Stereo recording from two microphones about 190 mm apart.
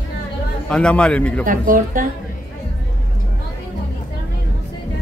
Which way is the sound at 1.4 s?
45° right (ahead or behind).